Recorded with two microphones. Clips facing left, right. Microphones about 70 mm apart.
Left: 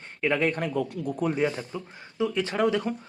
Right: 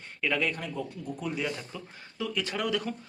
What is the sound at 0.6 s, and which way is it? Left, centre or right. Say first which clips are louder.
Speech: left 8 dB; left.